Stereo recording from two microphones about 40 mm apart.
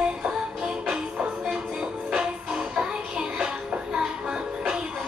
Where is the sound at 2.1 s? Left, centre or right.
Centre.